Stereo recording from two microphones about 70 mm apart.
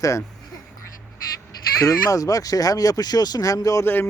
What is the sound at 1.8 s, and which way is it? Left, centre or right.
Speech, left.